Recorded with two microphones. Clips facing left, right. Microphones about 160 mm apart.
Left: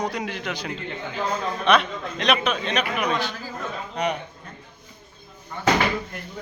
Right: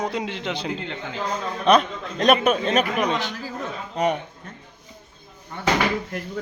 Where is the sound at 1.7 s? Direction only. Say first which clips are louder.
Right 3 dB; 40° right (ahead or behind).